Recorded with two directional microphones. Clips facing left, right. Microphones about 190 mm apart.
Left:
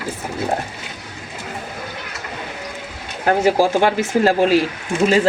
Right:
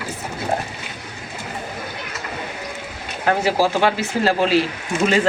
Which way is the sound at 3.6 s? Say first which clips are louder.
Left 2 dB; 50° left (ahead or behind).